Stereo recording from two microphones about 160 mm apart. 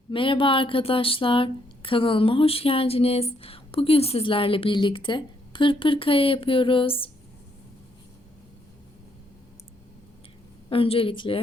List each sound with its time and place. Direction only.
0.1 s speech: 30° left (ahead or behind)
10.7 s speech: 35° left (ahead or behind)